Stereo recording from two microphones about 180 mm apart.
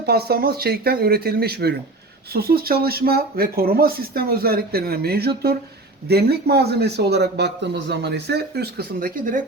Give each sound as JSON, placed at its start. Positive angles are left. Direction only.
{"t": 0.0, "sound": "speech", "side_deg": -60}